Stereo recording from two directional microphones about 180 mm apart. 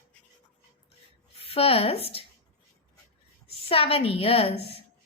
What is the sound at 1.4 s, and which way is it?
Speech, 35° left (ahead or behind).